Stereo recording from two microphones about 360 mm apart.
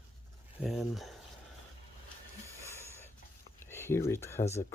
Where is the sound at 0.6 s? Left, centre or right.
Centre.